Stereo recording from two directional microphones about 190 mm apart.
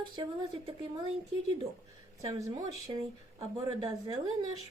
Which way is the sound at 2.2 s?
15° right (ahead or behind).